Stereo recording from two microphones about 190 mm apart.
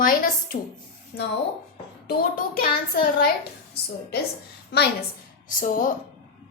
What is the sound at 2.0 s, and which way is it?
Child singing, 50° left (ahead or behind).